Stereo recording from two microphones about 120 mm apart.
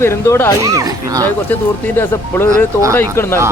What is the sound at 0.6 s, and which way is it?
Speech, 30° right (ahead or behind).